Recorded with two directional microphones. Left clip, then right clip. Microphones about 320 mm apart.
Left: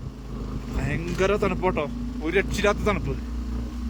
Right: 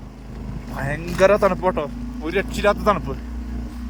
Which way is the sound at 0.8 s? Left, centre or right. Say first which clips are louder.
Right 8 dB; centre.